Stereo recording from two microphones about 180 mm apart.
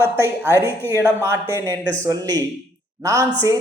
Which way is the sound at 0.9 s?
15° right (ahead or behind).